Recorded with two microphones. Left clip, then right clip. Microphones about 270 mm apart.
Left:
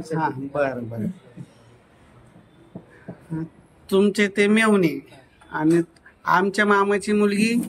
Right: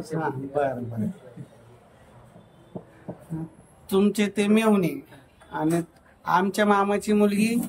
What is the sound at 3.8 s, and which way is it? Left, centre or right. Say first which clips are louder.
Speech: left 4 dB; centre.